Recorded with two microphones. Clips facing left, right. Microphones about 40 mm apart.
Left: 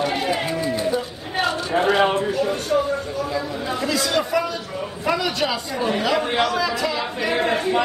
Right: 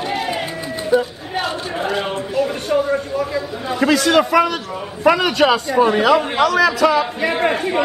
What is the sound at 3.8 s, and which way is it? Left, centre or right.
A man's voice, right.